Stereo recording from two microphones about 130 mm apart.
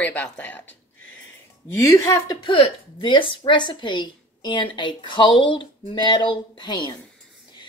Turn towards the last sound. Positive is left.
turn(degrees=35)  # may be behind; listen again after turning